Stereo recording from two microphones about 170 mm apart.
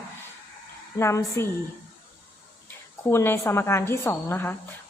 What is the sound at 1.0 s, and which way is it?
Speech, 15° left (ahead or behind).